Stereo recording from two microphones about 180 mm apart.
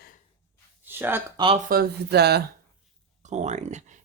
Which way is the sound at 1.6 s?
60° right (ahead or behind).